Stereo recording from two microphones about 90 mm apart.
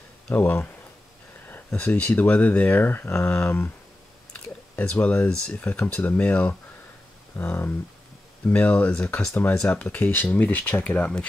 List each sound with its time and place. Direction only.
0.3 s speech: 20° left (ahead or behind)
1.7 s speech: 15° left (ahead or behind)
4.3 s speech: 15° left (ahead or behind)
9.3 s speech: 25° left (ahead or behind)
9.6 s speech: 15° left (ahead or behind)